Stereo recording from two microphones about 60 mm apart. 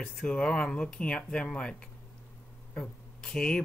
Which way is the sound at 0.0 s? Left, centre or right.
Centre.